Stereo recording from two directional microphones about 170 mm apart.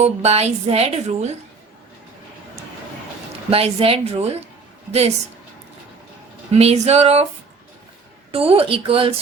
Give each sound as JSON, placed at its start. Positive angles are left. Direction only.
{"t": 0.0, "sound": "a woman's voice", "side_deg": -40}
{"t": 3.5, "sound": "a woman's voice", "side_deg": -35}
{"t": 6.5, "sound": "a woman's voice", "side_deg": -40}
{"t": 8.3, "sound": "a woman's voice", "side_deg": -35}